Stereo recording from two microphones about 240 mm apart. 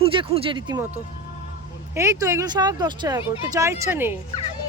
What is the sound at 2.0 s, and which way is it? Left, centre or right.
Speech, centre.